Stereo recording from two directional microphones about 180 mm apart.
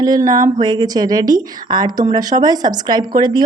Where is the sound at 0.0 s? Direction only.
20° right (ahead or behind).